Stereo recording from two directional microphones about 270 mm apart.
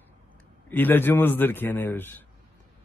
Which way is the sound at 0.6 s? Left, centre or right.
Centre.